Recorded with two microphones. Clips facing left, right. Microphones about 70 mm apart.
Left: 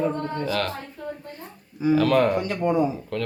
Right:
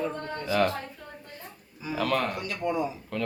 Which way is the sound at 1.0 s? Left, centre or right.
Centre.